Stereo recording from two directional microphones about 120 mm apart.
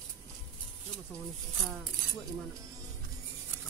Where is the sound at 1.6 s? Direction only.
Centre (ahead or behind).